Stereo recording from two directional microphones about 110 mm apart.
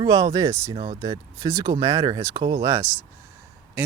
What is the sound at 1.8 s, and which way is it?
Speech, 35° right (ahead or behind).